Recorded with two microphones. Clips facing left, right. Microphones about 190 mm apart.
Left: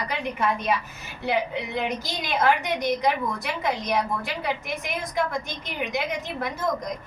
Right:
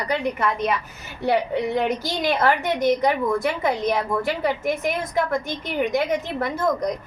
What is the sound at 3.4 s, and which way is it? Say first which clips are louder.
A woman's voice: right 6 dB; 50° right (ahead or behind).